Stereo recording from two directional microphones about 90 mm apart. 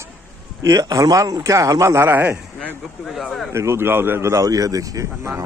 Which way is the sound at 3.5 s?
30° right (ahead or behind).